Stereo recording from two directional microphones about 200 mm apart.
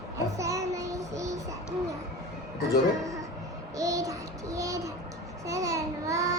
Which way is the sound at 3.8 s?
15° right (ahead or behind).